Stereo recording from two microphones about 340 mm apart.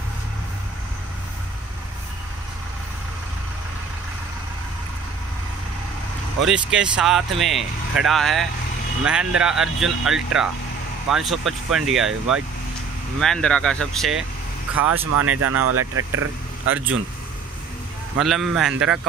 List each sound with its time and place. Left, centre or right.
6.4 s speech: centre
15.1 s speech: right
18.1 s speech: centre